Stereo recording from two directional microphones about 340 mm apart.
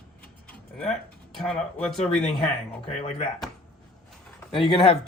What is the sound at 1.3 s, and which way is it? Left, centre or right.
Speech, centre.